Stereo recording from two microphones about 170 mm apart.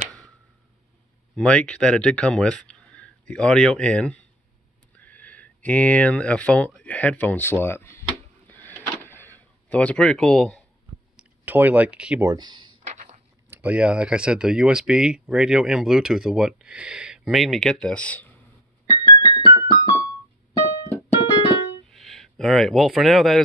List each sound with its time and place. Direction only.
1.3 s speech: 5° left (ahead or behind)
8.5 s a sound: 10° left (ahead or behind)
11.1 s speech: 10° right (ahead or behind)
12.3 s speech: 25° right (ahead or behind)
12.8 s walk: 40° right (ahead or behind)
13.5 s speech: 10° right (ahead or behind); by 18.3 s 10° left (ahead or behind)
18.9 s keyboard: 25° left (ahead or behind)
21.8 s speech: centre (ahead or behind)